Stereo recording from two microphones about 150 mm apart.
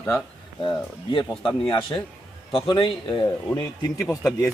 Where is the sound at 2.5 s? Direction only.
35° left (ahead or behind); by 4.1 s 20° left (ahead or behind).